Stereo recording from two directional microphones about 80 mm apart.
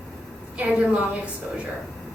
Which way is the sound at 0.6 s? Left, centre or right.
Centre.